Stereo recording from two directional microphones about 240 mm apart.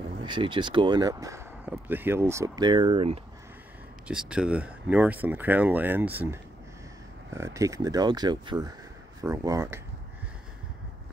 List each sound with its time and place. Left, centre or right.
0.2 s speech: centre
4.1 s speech: centre